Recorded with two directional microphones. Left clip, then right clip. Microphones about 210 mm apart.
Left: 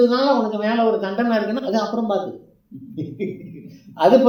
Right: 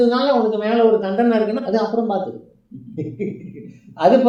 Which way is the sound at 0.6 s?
15° left (ahead or behind).